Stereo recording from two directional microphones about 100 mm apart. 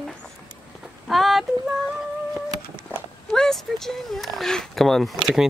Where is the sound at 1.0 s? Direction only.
Centre (ahead or behind).